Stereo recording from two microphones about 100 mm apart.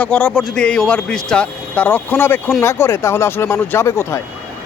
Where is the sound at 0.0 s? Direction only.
15° left (ahead or behind).